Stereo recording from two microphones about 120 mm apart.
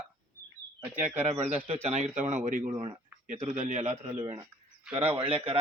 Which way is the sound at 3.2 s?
75° right (ahead or behind).